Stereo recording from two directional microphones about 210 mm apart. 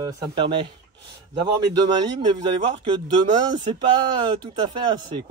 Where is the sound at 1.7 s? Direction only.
20° right (ahead or behind).